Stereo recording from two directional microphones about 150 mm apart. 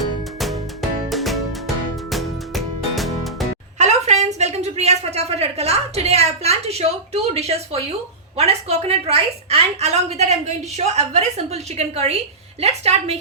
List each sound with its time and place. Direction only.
0.3 s music: centre (ahead or behind)
3.8 s a sound: 50° right (ahead or behind)
8.4 s a woman's voice: 45° right (ahead or behind)